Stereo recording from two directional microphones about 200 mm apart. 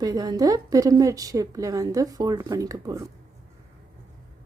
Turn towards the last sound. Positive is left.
turn(degrees=-15)  # may be behind; listen again after turning